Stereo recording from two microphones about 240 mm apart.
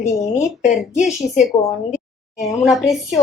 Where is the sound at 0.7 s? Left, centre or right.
Centre.